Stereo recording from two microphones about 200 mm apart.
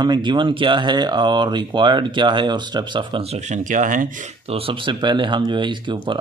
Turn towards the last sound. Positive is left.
turn(degrees=-25)  # may be behind; listen again after turning